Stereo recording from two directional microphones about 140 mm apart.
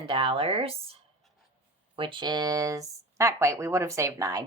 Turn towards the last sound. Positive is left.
turn(degrees=-25)  # may be behind; listen again after turning